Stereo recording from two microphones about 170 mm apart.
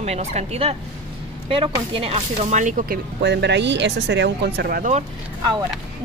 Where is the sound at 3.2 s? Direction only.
80° right.